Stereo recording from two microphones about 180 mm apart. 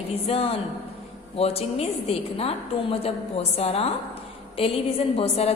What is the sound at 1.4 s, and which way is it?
A woman's voice, 35° left (ahead or behind).